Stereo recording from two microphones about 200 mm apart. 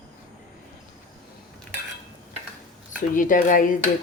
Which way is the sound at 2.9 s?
40° left (ahead or behind).